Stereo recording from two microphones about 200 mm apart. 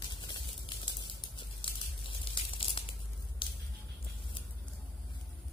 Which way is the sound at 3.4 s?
25° left (ahead or behind).